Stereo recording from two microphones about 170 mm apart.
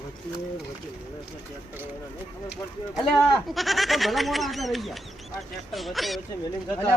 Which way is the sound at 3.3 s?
Centre (ahead or behind).